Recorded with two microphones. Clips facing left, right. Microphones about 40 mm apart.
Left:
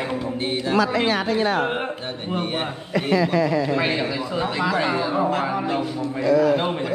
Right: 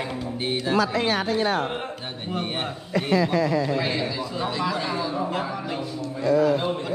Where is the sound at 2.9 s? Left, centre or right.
Left.